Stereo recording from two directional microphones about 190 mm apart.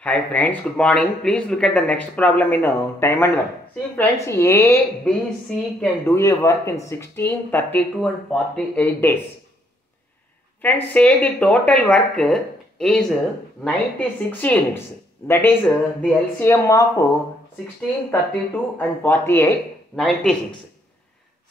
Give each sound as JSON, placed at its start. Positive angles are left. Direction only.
{"t": 0.0, "sound": "speech", "side_deg": 5}
{"t": 10.6, "sound": "speech", "side_deg": 10}
{"t": 15.6, "sound": "speech", "side_deg": 0}
{"t": 16.3, "sound": "speech", "side_deg": 15}
{"t": 18.5, "sound": "speech", "side_deg": 10}
{"t": 20.0, "sound": "speech", "side_deg": 5}